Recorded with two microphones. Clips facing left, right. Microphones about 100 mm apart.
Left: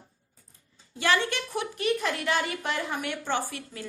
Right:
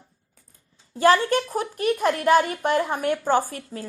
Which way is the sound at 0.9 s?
40° right (ahead or behind).